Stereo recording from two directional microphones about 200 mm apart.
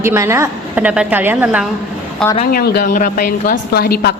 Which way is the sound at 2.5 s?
50° left (ahead or behind).